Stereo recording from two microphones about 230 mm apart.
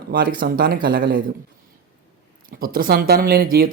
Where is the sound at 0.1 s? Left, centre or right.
Right.